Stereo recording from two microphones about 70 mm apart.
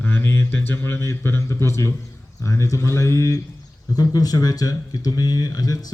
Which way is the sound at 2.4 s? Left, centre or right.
Left.